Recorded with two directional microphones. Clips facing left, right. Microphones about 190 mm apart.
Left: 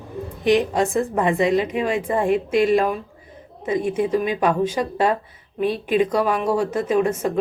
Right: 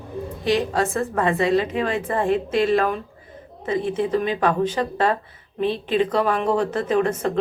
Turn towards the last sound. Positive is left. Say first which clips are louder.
# left 1 dB
turn(degrees=10)  # may be behind; listen again after turning